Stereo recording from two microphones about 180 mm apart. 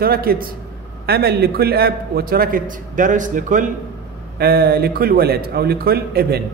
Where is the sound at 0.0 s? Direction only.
55° right (ahead or behind).